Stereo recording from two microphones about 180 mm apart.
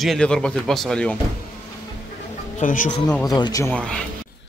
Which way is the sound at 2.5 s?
45° left (ahead or behind).